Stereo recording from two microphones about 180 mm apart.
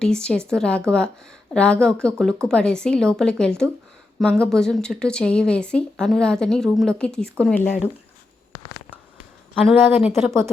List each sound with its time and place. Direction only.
0.0 s a woman's voice: 5° left (ahead or behind)
9.6 s a woman's voice: centre (ahead or behind)